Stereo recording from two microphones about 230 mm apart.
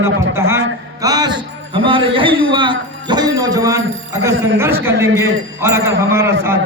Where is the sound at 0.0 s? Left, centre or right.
Centre.